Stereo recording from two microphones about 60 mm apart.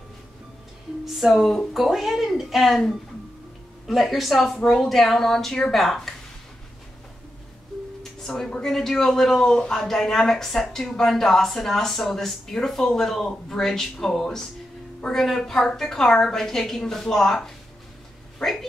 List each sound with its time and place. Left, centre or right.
1.0 s speech: centre
8.0 s music: centre
8.5 s speech: centre
8.7 s speech: centre